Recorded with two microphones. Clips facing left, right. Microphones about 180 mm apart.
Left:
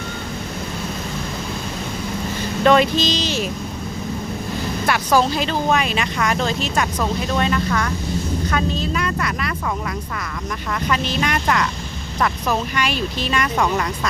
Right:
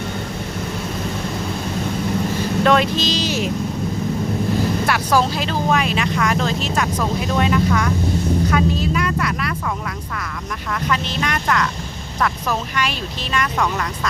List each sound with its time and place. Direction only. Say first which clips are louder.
2.6 s speech: left 3 dB; centre (ahead or behind)
4.9 s speech: left 4 dB; 5° right (ahead or behind)
10.8 s speech: left 1 dB; centre (ahead or behind)